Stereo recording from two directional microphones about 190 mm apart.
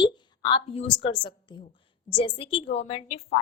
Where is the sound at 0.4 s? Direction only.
30° left (ahead or behind).